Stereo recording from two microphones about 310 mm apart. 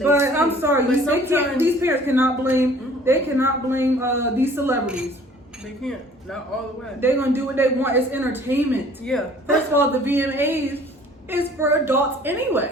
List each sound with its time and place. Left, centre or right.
0.0 s a man's voice: centre
7.0 s a woman's voice: centre
9.7 s a woman's voice: centre